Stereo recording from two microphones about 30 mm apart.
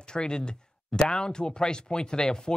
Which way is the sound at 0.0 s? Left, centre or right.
Left.